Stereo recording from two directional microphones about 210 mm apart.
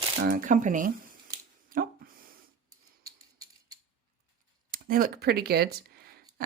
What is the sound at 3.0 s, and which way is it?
Mechanisms, 15° right (ahead or behind).